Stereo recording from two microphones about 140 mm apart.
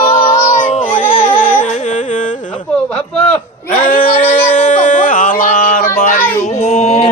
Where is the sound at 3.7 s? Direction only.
75° left (ahead or behind).